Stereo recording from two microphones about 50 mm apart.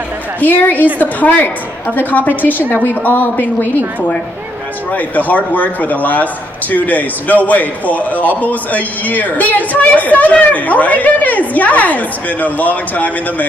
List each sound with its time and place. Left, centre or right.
0.4 s a man's voice: left
4.9 s a man's voice: left